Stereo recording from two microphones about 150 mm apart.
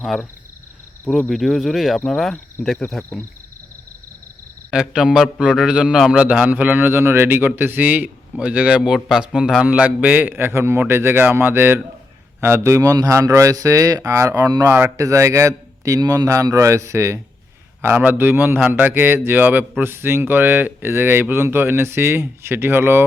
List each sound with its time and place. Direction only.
1.3 s speech: centre (ahead or behind)
3.0 s speech: 15° left (ahead or behind)
4.7 s a man's voice: 5° right (ahead or behind)